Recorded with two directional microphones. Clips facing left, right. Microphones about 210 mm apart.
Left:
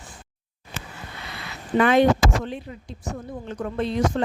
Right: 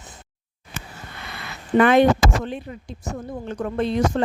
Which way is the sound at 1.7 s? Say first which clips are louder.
Right 2 dB; 55° right (ahead or behind).